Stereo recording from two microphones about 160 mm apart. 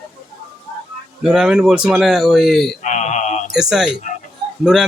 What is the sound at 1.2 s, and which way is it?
A man's voice, 5° right (ahead or behind).